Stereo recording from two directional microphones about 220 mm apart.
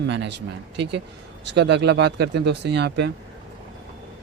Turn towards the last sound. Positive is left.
turn(degrees=-50)  # may be behind; listen again after turning